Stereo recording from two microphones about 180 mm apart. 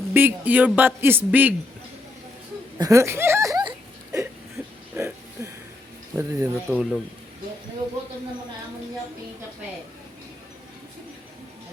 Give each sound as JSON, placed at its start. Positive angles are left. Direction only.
{"t": 0.1, "sound": "speech", "side_deg": -10}
{"t": 2.7, "sound": "a sound", "side_deg": -20}
{"t": 6.1, "sound": "speech", "side_deg": -15}
{"t": 6.7, "sound": "speech", "side_deg": 0}